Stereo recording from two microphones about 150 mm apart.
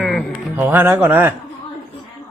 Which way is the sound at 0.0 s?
5° left (ahead or behind).